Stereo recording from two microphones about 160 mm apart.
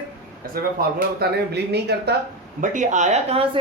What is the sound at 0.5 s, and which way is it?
Speech, 65° right (ahead or behind).